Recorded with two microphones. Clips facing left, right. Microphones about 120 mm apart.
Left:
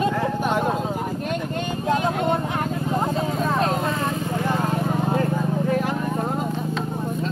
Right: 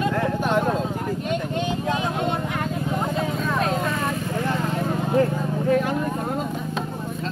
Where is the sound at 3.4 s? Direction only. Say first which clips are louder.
Left 3 dB; 35° left (ahead or behind).